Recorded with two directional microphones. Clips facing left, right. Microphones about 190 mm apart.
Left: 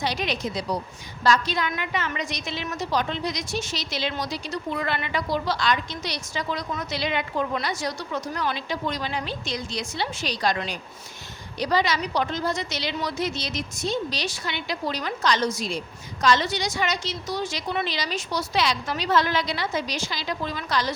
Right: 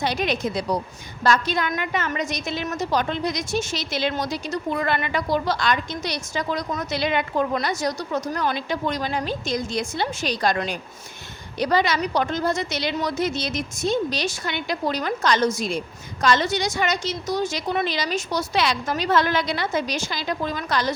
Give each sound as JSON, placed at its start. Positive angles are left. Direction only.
{"t": 0.0, "sound": "a woman's voice", "side_deg": -55}